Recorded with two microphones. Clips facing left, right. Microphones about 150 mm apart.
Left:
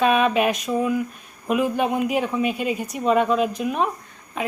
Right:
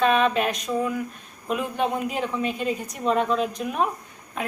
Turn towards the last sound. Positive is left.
turn(degrees=0)  # may be behind; listen again after turning